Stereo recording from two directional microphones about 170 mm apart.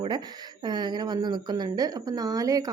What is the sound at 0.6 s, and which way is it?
A woman's voice, 25° right (ahead or behind).